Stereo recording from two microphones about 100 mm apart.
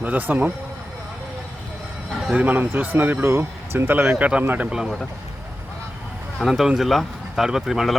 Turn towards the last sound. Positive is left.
turn(degrees=0)  # may be behind; listen again after turning